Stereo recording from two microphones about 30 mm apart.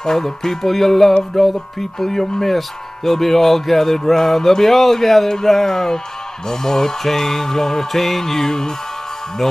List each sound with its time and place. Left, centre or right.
0.0 s speech: centre